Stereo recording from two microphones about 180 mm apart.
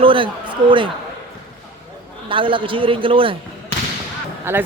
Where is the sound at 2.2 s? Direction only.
30° right (ahead or behind).